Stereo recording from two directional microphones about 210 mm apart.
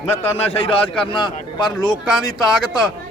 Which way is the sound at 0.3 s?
30° left (ahead or behind).